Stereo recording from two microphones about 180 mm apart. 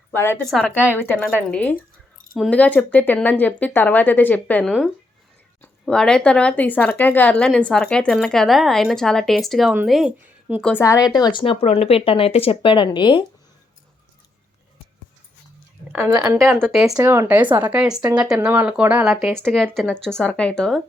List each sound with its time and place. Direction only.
0.1 s speech: 10° left (ahead or behind)
5.8 s speech: 5° left (ahead or behind)
10.6 s speech: 10° left (ahead or behind); by 13.2 s 25° left (ahead or behind)
16.1 s speech: 15° right (ahead or behind)
16.4 s speech: centre (ahead or behind)
17.0 s speech: 15° right (ahead or behind); by 20.8 s 5° left (ahead or behind)